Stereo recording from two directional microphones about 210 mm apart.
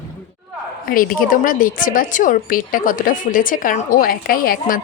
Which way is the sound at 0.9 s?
40° left (ahead or behind).